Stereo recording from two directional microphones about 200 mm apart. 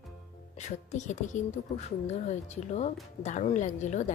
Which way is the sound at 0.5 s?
35° left (ahead or behind).